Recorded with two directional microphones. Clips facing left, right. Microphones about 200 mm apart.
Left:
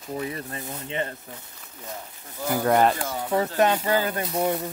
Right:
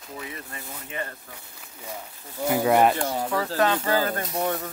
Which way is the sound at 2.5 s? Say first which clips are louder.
Right 1 dB; 5° right (ahead or behind).